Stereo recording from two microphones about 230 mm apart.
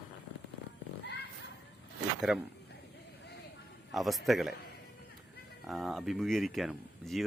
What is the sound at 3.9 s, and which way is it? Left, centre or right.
Speech, centre.